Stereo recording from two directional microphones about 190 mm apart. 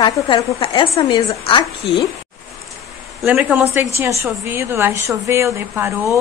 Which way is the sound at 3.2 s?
10° right (ahead or behind).